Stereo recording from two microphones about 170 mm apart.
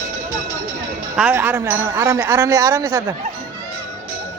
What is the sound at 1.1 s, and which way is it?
A woman's voice, 10° right (ahead or behind).